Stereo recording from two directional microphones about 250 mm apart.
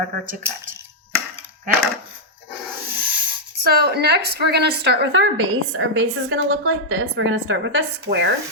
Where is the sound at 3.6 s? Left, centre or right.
Right.